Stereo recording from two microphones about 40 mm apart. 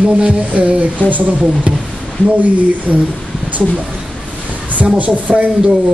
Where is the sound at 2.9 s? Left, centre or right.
Centre.